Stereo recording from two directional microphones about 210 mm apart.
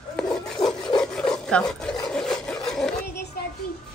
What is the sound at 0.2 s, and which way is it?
Rub, 5° left (ahead or behind).